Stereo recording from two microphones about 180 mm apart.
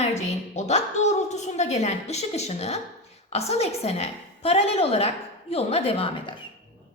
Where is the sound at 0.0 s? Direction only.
40° left (ahead or behind).